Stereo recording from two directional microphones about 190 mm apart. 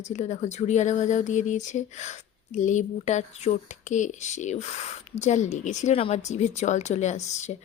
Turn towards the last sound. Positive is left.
turn(degrees=35)  # may be behind; listen again after turning